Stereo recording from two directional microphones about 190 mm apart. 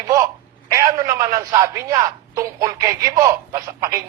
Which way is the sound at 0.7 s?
20° right (ahead or behind).